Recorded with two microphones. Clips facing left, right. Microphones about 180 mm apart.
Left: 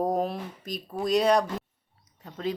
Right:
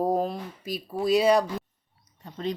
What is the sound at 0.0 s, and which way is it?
Speech, centre (ahead or behind).